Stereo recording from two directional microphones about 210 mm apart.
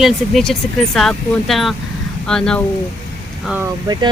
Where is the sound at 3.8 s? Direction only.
20° right (ahead or behind).